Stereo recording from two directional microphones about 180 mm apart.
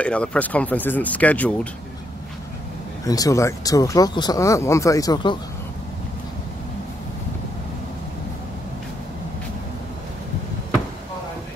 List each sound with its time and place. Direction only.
0.0 s speech: 5° left (ahead or behind)
3.1 s speech: 20° left (ahead or behind)